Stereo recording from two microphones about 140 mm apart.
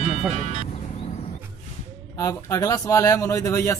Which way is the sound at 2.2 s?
20° left (ahead or behind).